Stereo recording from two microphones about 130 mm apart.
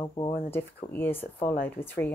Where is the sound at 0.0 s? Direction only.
35° left (ahead or behind).